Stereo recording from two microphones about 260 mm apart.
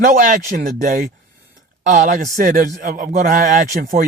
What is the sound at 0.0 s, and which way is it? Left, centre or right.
A man's voice, right.